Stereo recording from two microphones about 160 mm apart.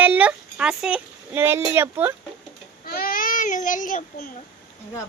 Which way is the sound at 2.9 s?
65° left (ahead or behind).